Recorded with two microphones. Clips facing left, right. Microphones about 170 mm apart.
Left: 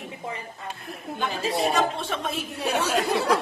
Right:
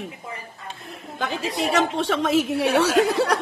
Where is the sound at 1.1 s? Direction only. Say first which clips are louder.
Even; 85° right.